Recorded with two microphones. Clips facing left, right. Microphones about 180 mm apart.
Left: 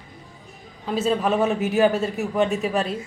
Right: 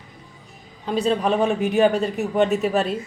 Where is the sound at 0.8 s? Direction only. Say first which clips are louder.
Right 1 dB; 5° left (ahead or behind).